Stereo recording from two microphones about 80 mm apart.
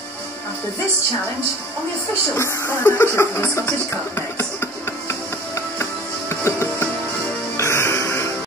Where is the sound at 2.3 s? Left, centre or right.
Left.